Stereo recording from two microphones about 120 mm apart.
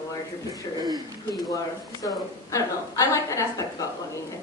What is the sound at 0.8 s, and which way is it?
Speech, 35° right (ahead or behind).